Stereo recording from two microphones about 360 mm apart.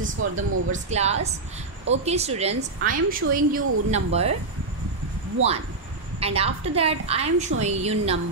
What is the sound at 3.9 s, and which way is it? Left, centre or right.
Speech, centre.